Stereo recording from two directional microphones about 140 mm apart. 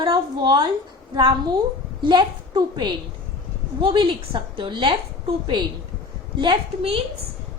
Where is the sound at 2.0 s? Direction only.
35° right (ahead or behind).